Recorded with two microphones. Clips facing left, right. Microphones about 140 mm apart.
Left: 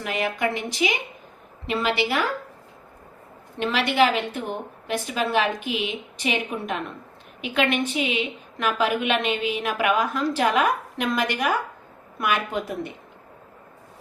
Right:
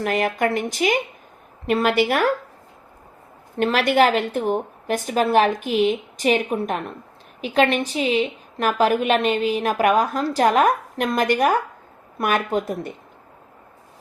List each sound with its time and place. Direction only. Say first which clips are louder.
0.0 s a woman's voice: right 5 dB; 45° right (ahead or behind)
3.6 s a woman's voice: right 4 dB; 45° right (ahead or behind)